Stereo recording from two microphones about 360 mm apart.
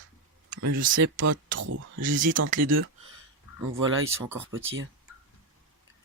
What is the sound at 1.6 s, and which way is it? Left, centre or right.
Speech, right.